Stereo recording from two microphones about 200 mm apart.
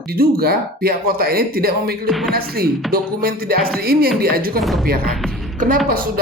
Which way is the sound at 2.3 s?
50° right (ahead or behind).